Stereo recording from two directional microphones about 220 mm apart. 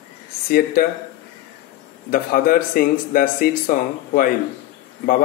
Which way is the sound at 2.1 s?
40° left (ahead or behind).